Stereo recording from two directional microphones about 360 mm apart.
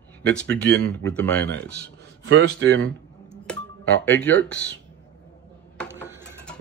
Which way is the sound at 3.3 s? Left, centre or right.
Centre.